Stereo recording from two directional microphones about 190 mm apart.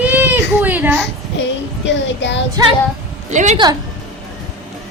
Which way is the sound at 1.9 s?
70° left (ahead or behind).